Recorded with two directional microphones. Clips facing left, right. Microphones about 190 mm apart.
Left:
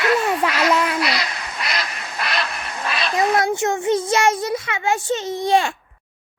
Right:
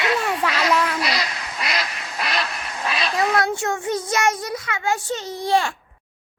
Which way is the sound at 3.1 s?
20° left (ahead or behind).